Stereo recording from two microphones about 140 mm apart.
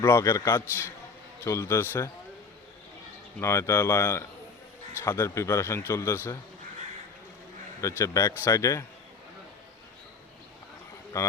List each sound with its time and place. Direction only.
0.0 s a man's voice: 20° left (ahead or behind)
3.4 s a man's voice: 20° left (ahead or behind)
7.8 s a man's voice: 20° left (ahead or behind)
11.1 s a man's voice: 25° left (ahead or behind)